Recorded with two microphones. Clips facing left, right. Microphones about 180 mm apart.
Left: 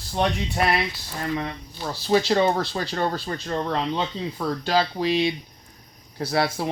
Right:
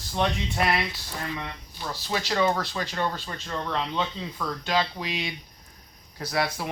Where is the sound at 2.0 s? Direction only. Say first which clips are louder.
Left 6 dB; 30° left (ahead or behind).